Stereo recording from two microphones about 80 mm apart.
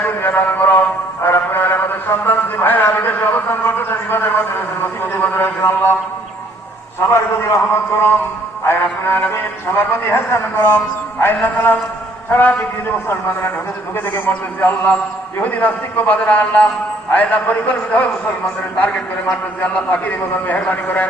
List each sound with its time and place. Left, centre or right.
0.0 s a sound: left
7.1 s a man's voice: left
13.9 s a man's voice: left